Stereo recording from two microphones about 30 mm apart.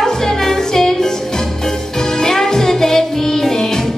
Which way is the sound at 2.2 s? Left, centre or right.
Centre.